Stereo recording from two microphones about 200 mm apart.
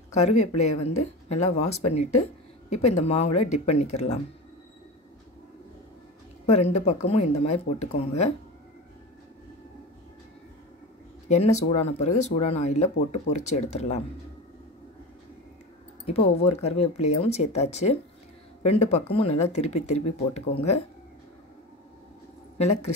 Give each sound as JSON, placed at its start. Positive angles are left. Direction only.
{"t": 0.1, "sound": "speech", "side_deg": 35}
{"t": 6.4, "sound": "speech", "side_deg": 30}
{"t": 11.2, "sound": "speech", "side_deg": 35}
{"t": 16.1, "sound": "speech", "side_deg": 30}